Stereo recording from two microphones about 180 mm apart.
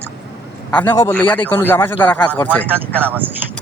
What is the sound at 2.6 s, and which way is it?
Speech, 10° right (ahead or behind).